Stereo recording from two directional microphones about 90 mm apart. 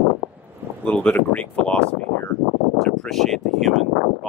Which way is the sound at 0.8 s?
15° left (ahead or behind).